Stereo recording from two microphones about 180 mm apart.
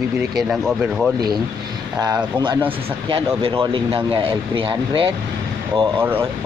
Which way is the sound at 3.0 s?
30° right (ahead or behind).